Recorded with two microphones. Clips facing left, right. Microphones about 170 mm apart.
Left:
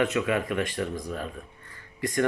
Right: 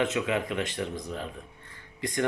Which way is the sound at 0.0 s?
20° right (ahead or behind).